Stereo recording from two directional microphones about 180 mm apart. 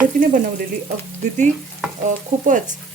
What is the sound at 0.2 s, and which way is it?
Speech, 45° right (ahead or behind).